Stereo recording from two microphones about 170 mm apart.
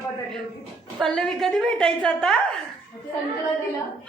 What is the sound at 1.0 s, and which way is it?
Speech, 5° left (ahead or behind).